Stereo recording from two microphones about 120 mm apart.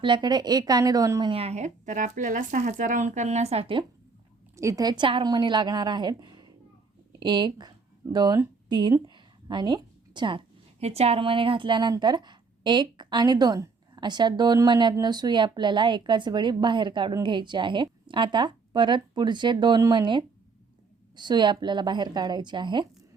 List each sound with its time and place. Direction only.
0.0 s a woman's voice: 40° right (ahead or behind)
1.3 s speech: 60° right (ahead or behind)
4.5 s a woman's voice: 25° right (ahead or behind)
8.7 s a sound: 40° right (ahead or behind)
10.8 s a woman's voice: 60° right (ahead or behind); by 22.9 s 40° right (ahead or behind)